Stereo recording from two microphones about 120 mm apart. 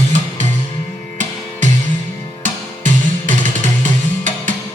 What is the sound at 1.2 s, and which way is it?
Music, 90° right.